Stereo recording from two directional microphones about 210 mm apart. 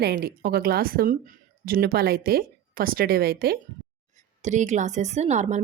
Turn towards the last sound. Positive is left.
turn(degrees=-35)  # may be behind; listen again after turning